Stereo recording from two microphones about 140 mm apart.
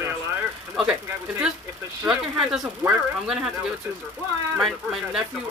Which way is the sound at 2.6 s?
15° right (ahead or behind).